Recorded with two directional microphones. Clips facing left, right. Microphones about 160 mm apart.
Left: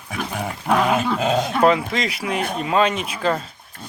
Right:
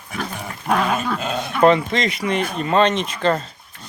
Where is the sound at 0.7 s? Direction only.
15° left (ahead or behind).